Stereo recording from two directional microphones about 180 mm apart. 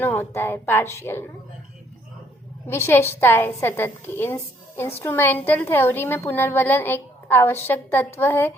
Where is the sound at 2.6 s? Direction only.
15° left (ahead or behind).